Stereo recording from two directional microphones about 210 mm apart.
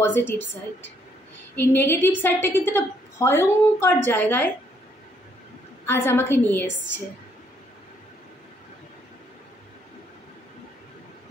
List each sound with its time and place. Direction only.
0.0 s a woman's voice: 10° left (ahead or behind)
1.6 s a woman's voice: 10° left (ahead or behind)
5.9 s a woman's voice: 10° left (ahead or behind)